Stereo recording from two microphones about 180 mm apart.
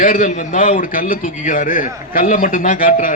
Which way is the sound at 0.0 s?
45° left (ahead or behind).